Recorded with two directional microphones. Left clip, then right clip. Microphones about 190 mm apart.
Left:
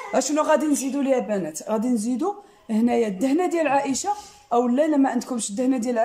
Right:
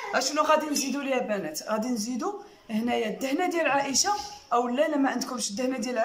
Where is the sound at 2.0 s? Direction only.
15° left (ahead or behind).